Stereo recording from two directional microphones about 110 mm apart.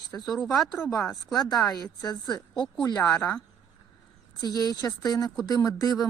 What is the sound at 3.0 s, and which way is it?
Speech, 10° left (ahead or behind).